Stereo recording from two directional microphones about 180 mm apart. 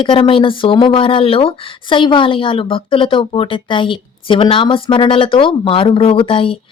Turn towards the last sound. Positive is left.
turn(degrees=30)  # may be behind; listen again after turning